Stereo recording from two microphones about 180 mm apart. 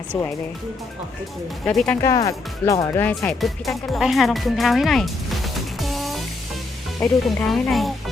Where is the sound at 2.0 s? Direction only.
20° left (ahead or behind).